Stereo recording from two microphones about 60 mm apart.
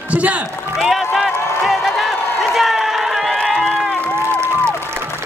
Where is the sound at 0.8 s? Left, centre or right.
Centre.